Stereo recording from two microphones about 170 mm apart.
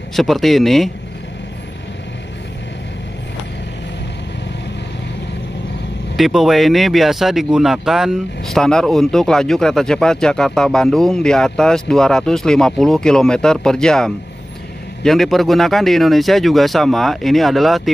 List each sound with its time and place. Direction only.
0.1 s speech: centre (ahead or behind)
6.1 s speech: centre (ahead or behind)